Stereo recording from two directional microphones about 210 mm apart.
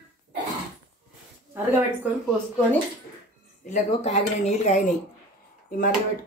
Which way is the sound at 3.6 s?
35° left (ahead or behind).